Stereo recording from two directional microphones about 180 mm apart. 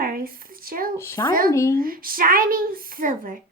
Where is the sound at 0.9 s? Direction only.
15° left (ahead or behind).